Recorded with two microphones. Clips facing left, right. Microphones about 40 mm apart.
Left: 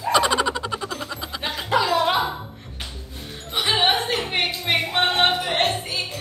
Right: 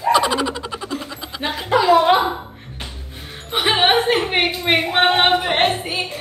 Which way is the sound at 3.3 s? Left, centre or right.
Right.